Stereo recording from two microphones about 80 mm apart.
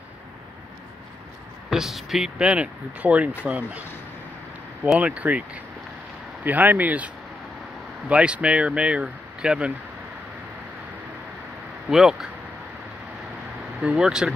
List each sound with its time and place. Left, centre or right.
1.7 s speech: centre
4.9 s speech: centre
8.1 s speech: centre
11.9 s speech: centre
13.7 s speech: centre